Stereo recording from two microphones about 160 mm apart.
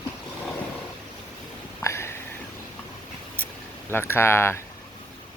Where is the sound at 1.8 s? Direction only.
15° left (ahead or behind).